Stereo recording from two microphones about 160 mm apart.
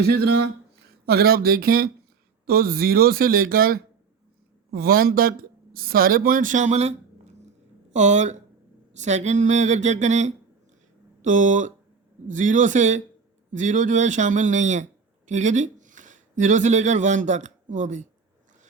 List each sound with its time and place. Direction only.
0.0 s speech: 75° right (ahead or behind); by 6.9 s 45° right (ahead or behind)
7.9 s a sound: 45° right (ahead or behind)
15.3 s speech: 50° right (ahead or behind)